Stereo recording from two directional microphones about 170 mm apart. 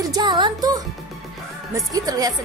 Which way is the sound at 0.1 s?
25° right (ahead or behind).